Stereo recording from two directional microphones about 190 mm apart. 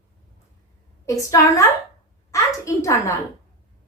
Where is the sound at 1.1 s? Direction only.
15° left (ahead or behind).